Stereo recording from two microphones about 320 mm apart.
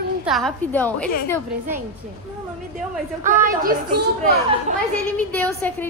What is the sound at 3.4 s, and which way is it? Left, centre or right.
Speech, right.